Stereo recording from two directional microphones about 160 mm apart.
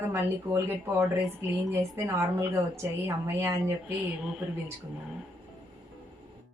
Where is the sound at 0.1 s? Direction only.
15° right (ahead or behind).